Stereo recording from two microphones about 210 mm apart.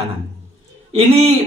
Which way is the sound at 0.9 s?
30° right (ahead or behind).